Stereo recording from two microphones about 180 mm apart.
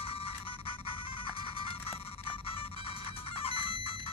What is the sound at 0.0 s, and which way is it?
Music, 30° left (ahead or behind).